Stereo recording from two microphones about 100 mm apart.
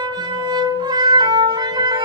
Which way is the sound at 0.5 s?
45° right (ahead or behind).